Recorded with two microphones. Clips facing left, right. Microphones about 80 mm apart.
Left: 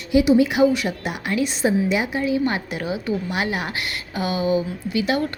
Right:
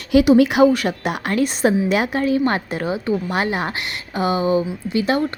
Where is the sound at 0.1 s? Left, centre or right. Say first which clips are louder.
Right 3 dB; right.